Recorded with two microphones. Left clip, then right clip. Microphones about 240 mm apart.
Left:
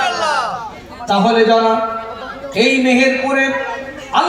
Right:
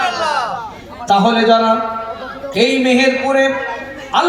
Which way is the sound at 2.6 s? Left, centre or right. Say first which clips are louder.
Even; right.